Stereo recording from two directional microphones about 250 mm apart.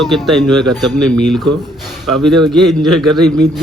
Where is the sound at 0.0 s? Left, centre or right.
Centre.